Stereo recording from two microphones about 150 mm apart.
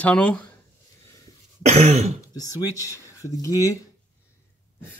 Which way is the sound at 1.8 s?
45° right (ahead or behind).